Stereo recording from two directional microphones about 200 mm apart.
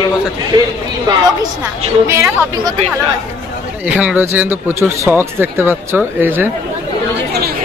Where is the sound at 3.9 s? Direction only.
5° right (ahead or behind).